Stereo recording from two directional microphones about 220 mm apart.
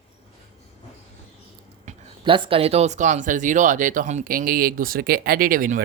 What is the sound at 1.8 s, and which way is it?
Speech, 25° right (ahead or behind).